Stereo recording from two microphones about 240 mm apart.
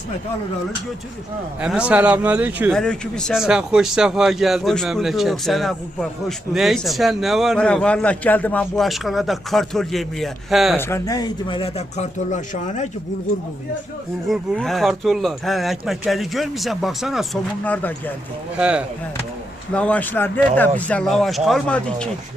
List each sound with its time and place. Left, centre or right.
1.6 s speech: centre
10.8 s speech: centre; by 12.9 s left
14.3 s speech: centre
18.5 s speech: centre